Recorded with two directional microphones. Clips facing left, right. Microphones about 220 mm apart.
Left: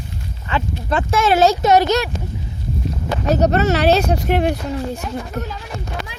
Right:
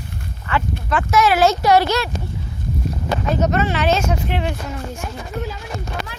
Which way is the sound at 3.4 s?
40° left (ahead or behind).